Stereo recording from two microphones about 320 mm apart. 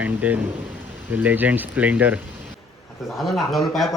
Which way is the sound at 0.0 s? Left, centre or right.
Centre.